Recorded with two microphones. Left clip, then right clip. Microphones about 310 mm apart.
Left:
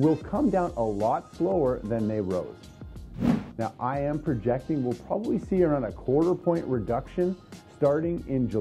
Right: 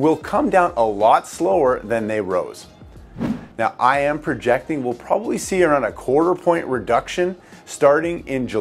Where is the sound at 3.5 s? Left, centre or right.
Centre.